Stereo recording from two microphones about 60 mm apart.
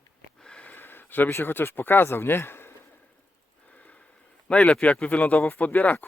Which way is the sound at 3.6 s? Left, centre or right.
Left.